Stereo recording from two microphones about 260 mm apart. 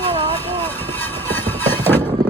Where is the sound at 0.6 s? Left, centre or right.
Centre.